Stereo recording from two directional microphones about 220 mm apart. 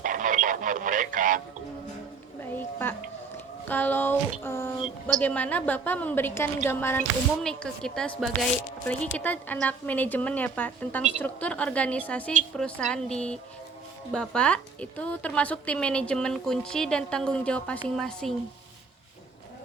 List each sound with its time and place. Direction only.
0.0 s radio: 35° right (ahead or behind)
2.4 s a sound: 10° left (ahead or behind)
5.2 s a woman's voice: 5° left (ahead or behind)